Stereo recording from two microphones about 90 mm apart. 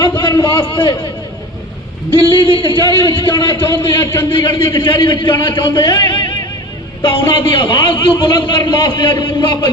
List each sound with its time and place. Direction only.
0.2 s a man's voice: 55° left (ahead or behind)
2.1 s a man's voice: 70° left (ahead or behind)
4.0 s a man's voice: 25° left (ahead or behind)
4.3 s a man's voice: 65° left (ahead or behind)